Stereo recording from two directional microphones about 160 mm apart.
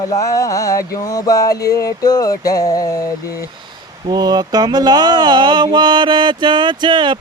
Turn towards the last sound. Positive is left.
turn(degrees=-30)  # may be behind; listen again after turning